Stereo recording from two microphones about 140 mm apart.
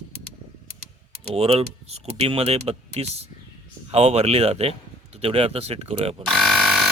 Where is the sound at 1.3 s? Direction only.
45° right (ahead or behind).